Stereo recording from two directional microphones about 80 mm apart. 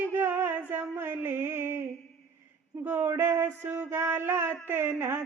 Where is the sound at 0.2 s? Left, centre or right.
Right.